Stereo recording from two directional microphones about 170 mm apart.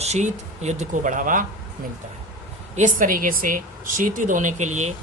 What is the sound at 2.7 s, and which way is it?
Speech, 50° right (ahead or behind).